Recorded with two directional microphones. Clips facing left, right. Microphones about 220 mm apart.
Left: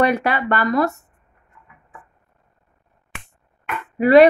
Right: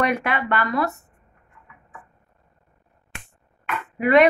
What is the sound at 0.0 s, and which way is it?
Speech, 35° left (ahead or behind).